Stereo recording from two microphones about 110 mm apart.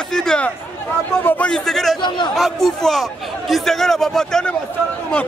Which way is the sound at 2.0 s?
45° left (ahead or behind).